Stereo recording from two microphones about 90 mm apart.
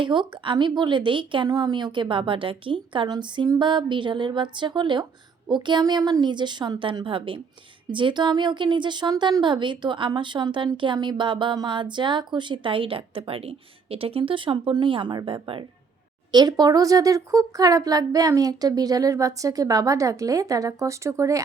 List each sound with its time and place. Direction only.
0.0 s a woman's voice: 65° right (ahead or behind)
1.5 s a woman's voice: 50° right (ahead or behind); by 3.1 s 65° right (ahead or behind)
3.1 s female singing: 55° right (ahead or behind)
3.6 s a woman's voice: 60° right (ahead or behind)
5.8 s a woman's voice: 45° right (ahead or behind); by 15.6 s 80° right
16.3 s speech: 50° right (ahead or behind)